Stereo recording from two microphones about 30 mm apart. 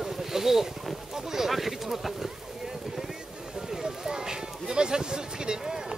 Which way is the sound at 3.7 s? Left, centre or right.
Right.